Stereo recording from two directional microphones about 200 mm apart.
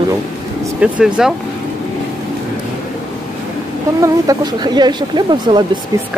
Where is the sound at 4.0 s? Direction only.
20° right (ahead or behind).